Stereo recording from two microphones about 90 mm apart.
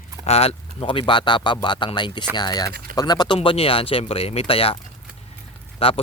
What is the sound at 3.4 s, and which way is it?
Speech, 90° left.